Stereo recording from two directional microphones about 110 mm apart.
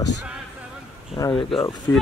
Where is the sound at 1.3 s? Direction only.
55° left (ahead or behind).